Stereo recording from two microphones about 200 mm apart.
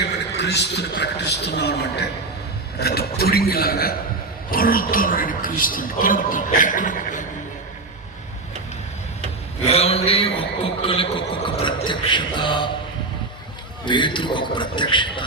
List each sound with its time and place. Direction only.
0.3 s a man's voice: 60° left (ahead or behind); by 7.3 s 40° left (ahead or behind)
9.6 s a man's voice: 30° left (ahead or behind)
13.8 s a man's voice: 25° left (ahead or behind)